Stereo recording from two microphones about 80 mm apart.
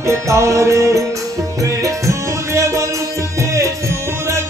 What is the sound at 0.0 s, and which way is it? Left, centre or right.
Music, right.